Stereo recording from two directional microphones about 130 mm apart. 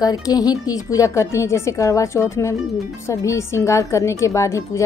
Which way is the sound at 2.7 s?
Centre (ahead or behind).